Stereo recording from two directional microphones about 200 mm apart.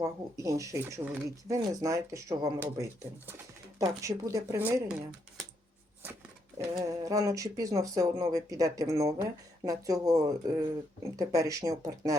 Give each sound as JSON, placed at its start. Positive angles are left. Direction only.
{"t": 0.0, "sound": "speech", "side_deg": -15}
{"t": 6.6, "sound": "speech", "side_deg": -15}